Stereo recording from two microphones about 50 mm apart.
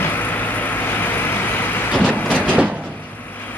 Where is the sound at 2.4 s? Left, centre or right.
Right.